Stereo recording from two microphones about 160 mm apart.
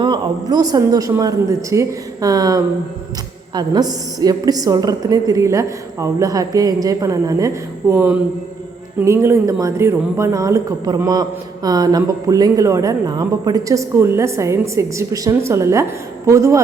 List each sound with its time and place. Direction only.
0.0 s speech: 25° right (ahead or behind)